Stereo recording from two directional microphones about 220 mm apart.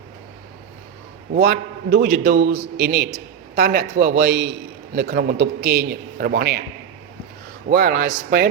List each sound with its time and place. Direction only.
1.3 s a man's voice: 40° right (ahead or behind)
7.7 s a man's voice: 40° right (ahead or behind)